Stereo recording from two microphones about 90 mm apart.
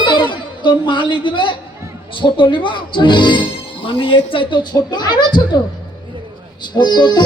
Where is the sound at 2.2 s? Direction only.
65° left (ahead or behind).